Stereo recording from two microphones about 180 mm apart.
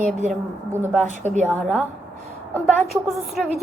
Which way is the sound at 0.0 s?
40° right (ahead or behind).